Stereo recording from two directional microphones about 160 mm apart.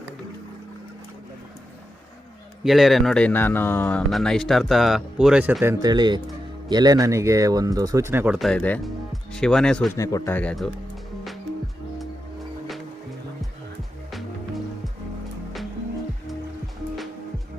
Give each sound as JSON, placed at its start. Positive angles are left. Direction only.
{"t": 2.6, "sound": "a man's voice", "side_deg": 0}
{"t": 5.8, "sound": "speech", "side_deg": -25}
{"t": 8.4, "sound": "speech", "side_deg": 5}
{"t": 9.9, "sound": "a man's voice", "side_deg": 20}
{"t": 10.3, "sound": "speech", "side_deg": 5}